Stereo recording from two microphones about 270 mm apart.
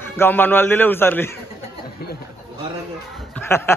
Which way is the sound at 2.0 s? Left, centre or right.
Left.